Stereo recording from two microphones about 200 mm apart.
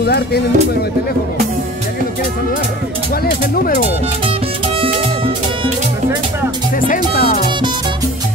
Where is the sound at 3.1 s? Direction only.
50° left (ahead or behind).